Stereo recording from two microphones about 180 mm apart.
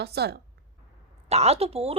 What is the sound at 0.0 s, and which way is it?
Speech, 65° right (ahead or behind).